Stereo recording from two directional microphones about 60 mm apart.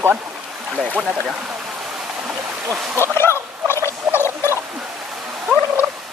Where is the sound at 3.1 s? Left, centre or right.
Left.